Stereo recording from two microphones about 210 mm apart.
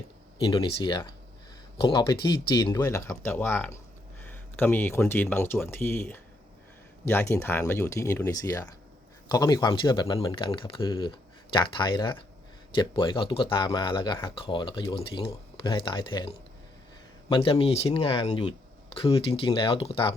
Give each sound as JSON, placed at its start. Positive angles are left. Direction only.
{"t": 0.3, "sound": "speech", "side_deg": 20}